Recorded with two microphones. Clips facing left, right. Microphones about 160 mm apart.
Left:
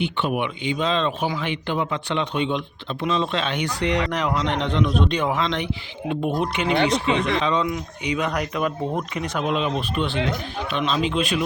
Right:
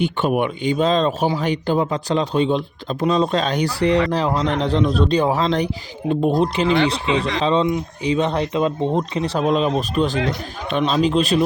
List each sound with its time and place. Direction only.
0.0 s speech: 45° right (ahead or behind)